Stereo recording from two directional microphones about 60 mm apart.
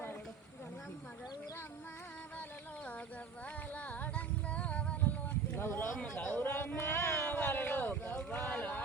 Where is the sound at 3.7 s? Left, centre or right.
Left.